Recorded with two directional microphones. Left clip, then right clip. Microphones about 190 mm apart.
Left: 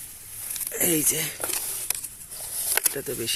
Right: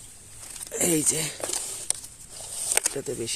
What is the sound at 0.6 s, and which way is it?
Speech, 20° right (ahead or behind).